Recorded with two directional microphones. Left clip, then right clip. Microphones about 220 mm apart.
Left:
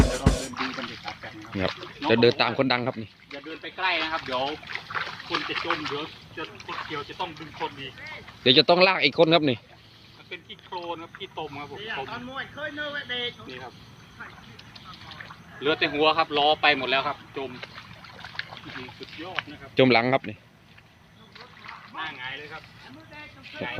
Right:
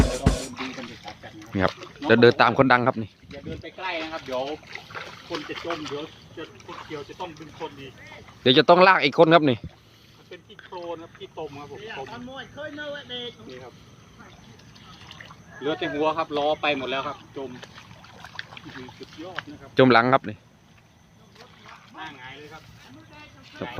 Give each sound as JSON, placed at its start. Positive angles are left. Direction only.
{"t": 0.0, "sound": "music", "side_deg": 0}
{"t": 2.0, "sound": "speech", "side_deg": -15}
{"t": 10.3, "sound": "speech", "side_deg": 0}
{"t": 11.9, "sound": "speech", "side_deg": -45}
{"t": 15.6, "sound": "speech", "side_deg": -30}
{"t": 18.4, "sound": "boat", "side_deg": -40}
{"t": 18.7, "sound": "speech", "side_deg": -40}
{"t": 19.7, "sound": "speech", "side_deg": -15}
{"t": 22.0, "sound": "a sound", "side_deg": -40}